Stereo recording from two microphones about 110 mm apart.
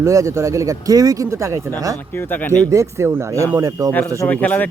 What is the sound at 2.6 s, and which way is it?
Speech, 30° right (ahead or behind).